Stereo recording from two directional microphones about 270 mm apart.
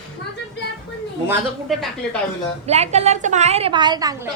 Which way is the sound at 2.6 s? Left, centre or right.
Right.